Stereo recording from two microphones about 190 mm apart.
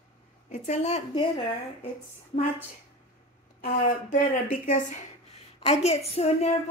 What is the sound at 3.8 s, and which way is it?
A woman's voice, 45° left (ahead or behind).